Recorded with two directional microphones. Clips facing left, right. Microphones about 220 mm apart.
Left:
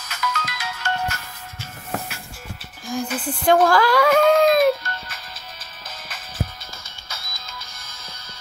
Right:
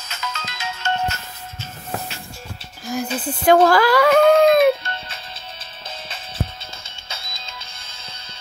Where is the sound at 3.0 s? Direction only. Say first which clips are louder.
Right 1 dB; 25° right (ahead or behind).